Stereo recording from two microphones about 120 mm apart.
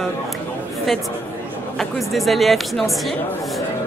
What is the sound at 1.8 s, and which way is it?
Speech, centre (ahead or behind).